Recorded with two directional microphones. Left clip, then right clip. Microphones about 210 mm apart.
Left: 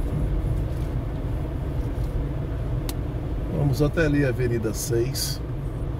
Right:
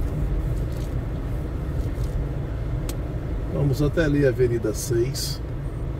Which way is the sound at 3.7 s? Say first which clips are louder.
Even; 20° left (ahead or behind).